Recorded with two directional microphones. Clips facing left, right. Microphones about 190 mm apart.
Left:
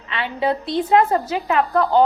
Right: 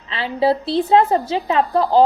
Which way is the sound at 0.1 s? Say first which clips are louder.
Right 4 dB; 30° right (ahead or behind).